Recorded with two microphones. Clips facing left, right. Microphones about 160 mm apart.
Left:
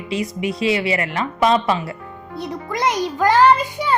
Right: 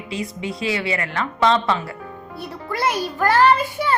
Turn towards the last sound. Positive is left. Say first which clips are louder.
# left 2 dB
turn(degrees=15)  # may be behind; listen again after turning